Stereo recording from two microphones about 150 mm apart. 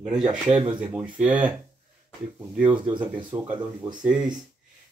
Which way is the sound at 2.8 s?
30° right (ahead or behind).